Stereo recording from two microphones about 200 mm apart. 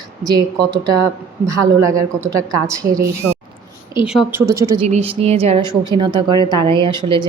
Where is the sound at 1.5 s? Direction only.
15° right (ahead or behind).